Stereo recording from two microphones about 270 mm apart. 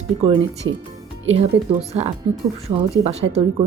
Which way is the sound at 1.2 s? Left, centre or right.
Right.